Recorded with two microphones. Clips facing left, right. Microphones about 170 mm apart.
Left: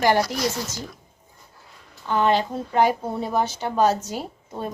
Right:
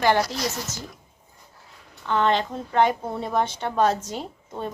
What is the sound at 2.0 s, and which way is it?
A woman's voice, 10° left (ahead or behind).